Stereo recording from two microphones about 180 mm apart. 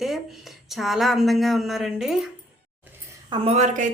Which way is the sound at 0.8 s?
Centre (ahead or behind).